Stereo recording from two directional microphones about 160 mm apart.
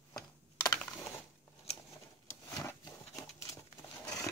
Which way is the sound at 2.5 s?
20° left (ahead or behind).